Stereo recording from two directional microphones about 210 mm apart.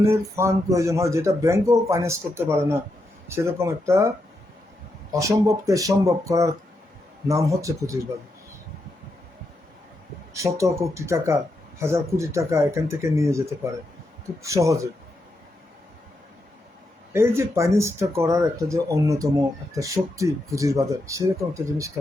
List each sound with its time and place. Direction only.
0.0 s speech: 15° right (ahead or behind)
5.1 s speech: 15° right (ahead or behind)
10.3 s speech: 15° right (ahead or behind)
17.1 s speech: 10° right (ahead or behind)